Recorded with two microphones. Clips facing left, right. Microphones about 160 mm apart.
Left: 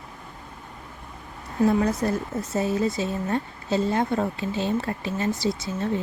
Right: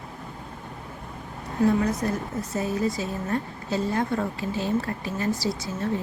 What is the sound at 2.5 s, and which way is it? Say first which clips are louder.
Speech: left 2 dB; 25° left (ahead or behind).